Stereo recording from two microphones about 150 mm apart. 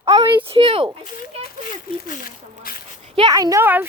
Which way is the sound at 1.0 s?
65° left (ahead or behind).